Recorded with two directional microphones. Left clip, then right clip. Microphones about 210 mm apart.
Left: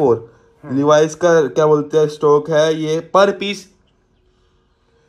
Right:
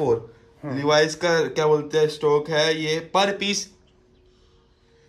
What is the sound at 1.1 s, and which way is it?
Speech, 5° right (ahead or behind).